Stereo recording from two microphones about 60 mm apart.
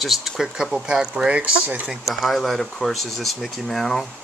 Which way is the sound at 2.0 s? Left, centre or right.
Centre.